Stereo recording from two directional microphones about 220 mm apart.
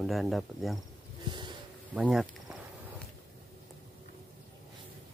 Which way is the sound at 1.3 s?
20° right (ahead or behind).